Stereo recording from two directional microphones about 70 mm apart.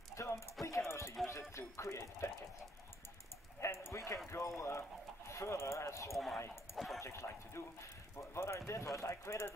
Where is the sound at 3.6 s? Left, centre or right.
Left.